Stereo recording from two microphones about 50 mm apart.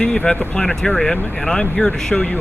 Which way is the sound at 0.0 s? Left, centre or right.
Centre.